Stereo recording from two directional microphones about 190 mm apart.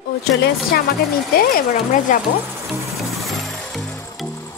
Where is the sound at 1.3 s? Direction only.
50° left (ahead or behind).